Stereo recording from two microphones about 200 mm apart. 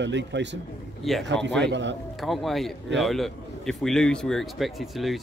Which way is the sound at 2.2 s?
Centre (ahead or behind).